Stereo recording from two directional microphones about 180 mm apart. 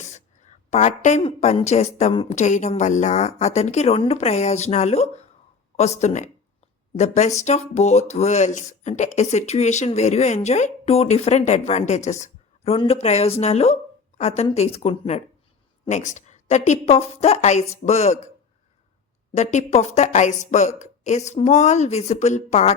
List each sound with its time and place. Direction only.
0.7 s a woman's voice: 40° left (ahead or behind)
19.3 s speech: 40° left (ahead or behind)